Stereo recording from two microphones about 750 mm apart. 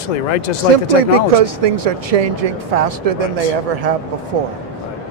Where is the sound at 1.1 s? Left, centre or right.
Right.